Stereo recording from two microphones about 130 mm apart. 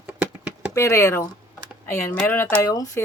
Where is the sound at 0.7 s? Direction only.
25° left (ahead or behind).